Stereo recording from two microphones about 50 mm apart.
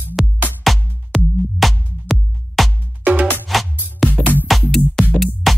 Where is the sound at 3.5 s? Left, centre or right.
Centre.